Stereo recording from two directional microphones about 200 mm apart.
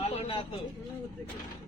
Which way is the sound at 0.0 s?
30° left (ahead or behind).